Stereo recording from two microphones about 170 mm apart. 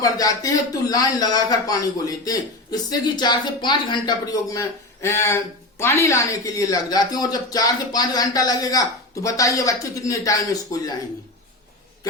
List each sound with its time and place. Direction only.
0.0 s speech: 20° left (ahead or behind)